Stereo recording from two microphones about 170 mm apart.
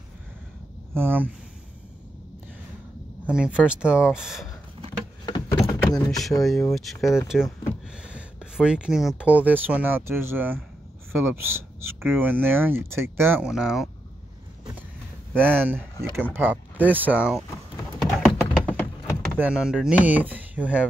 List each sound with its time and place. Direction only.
0.9 s speech: 10° right (ahead or behind)
3.3 s speech: 5° right (ahead or behind)
5.7 s a sound: 20° left (ahead or behind)
6.1 s speech: centre (ahead or behind)
15.3 s speech: 10° right (ahead or behind)
18.2 s tap: 5° left (ahead or behind)
19.3 s speech: 10° right (ahead or behind)